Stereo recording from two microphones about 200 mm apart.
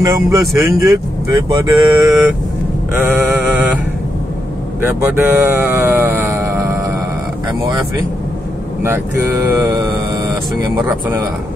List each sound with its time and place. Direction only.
0.0 s speech: 15° right (ahead or behind)
4.8 s speech: 10° right (ahead or behind)
9.5 s speech: 15° right (ahead or behind)
10.9 s speech: 10° right (ahead or behind)